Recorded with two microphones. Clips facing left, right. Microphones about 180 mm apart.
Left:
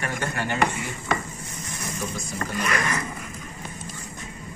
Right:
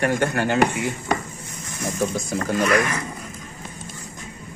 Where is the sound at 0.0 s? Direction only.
70° right (ahead or behind).